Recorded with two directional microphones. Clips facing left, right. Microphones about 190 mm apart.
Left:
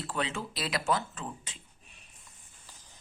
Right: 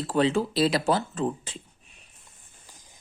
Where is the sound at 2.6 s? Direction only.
15° right (ahead or behind).